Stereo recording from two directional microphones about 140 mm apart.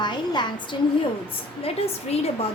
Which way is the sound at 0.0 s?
30° left (ahead or behind).